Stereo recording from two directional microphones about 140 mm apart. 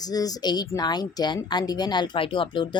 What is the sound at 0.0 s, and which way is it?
Speech, 25° left (ahead or behind).